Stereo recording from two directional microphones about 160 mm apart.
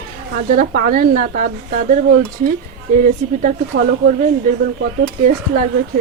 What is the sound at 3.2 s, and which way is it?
Speech, 50° right (ahead or behind).